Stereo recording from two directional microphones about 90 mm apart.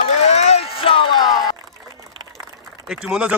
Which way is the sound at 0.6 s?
85° left.